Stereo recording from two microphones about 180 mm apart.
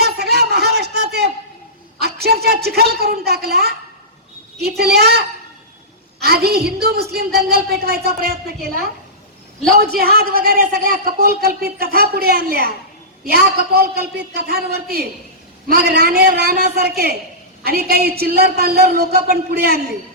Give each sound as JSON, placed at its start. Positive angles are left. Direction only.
{"t": 0.0, "sound": "a sound", "side_deg": -60}
{"t": 2.0, "sound": "a man's voice", "side_deg": -60}
{"t": 9.9, "sound": "speech", "side_deg": -60}